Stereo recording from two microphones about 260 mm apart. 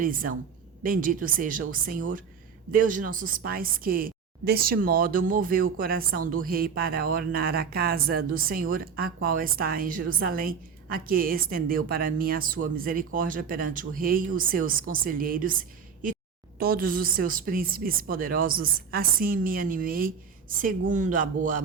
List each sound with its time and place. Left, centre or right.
0.0 s a woman's voice: right